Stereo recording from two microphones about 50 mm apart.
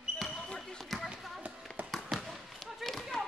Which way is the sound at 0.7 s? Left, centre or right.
Centre.